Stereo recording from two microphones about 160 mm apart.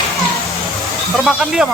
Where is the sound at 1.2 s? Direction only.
Centre (ahead or behind).